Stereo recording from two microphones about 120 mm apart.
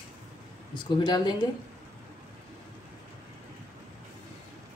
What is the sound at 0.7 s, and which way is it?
Speech, 40° left (ahead or behind).